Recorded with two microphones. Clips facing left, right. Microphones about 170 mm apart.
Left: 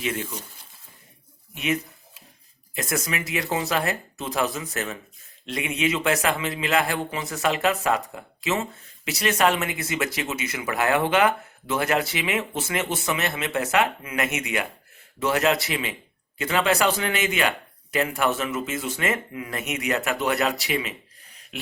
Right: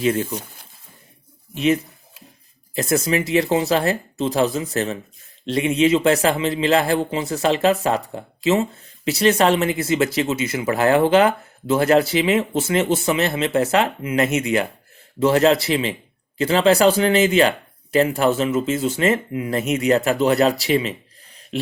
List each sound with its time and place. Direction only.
0.0 s speech: 35° right (ahead or behind)
1.5 s a man's voice: 30° right (ahead or behind)